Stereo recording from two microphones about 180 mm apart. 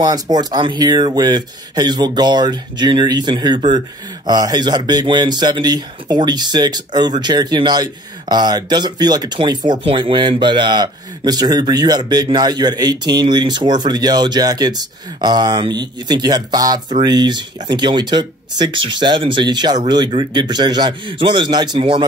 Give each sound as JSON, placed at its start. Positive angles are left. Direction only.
{"t": 0.0, "sound": "speech", "side_deg": -20}